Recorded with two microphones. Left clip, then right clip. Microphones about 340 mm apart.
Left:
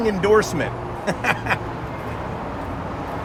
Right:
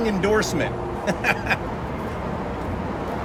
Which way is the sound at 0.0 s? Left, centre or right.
Centre.